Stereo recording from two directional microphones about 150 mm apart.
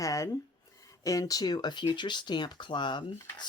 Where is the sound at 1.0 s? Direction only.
25° left (ahead or behind).